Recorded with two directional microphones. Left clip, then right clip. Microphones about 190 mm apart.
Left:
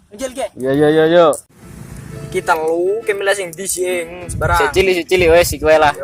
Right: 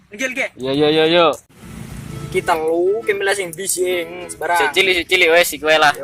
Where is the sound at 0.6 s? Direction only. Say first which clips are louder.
Left 3 dB; 45° left (ahead or behind).